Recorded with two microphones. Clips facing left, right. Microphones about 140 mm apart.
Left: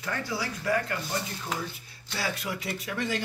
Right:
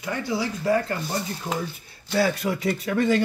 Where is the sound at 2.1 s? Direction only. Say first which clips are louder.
Right 10 dB; 55° right (ahead or behind).